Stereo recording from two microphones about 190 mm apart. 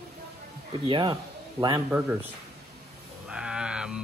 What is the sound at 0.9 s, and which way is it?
Speech, 25° right (ahead or behind).